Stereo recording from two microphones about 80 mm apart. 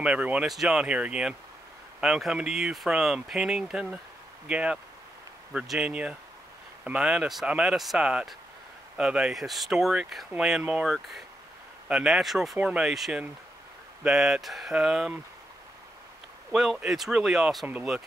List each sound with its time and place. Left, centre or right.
0.0 s speech: centre
0.5 s speech: centre
7.7 s speech: centre
8.0 s speech: centre
10.6 s speech: centre
10.9 s speech: centre
12.5 s speech: centre
12.9 s speech: centre
16.5 s speech: centre